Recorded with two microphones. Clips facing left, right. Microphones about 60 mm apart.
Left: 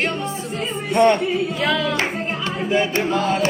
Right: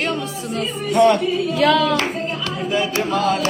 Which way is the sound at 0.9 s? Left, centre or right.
Left.